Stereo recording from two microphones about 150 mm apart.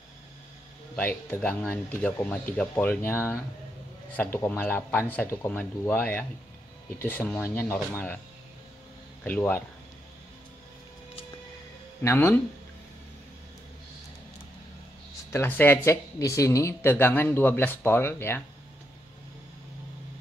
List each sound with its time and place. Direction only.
0.9 s speech: 10° left (ahead or behind)
9.2 s speech: 10° left (ahead or behind)
12.0 s speech: 15° left (ahead or behind)
15.3 s speech: 15° left (ahead or behind)